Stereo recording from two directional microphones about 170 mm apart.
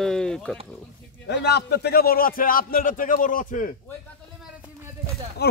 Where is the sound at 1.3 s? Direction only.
80° left; by 3.8 s 50° left (ahead or behind).